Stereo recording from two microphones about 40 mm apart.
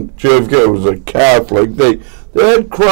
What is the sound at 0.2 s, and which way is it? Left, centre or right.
Speech, centre.